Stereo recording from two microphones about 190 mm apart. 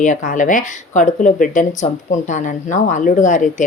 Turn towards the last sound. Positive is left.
turn(degrees=40)  # may be behind; listen again after turning